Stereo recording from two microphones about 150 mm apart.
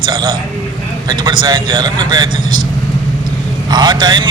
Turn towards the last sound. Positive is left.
turn(degrees=-30)  # may be behind; listen again after turning